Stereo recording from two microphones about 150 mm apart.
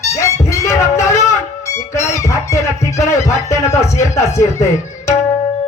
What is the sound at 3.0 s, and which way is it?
Speech, 20° left (ahead or behind).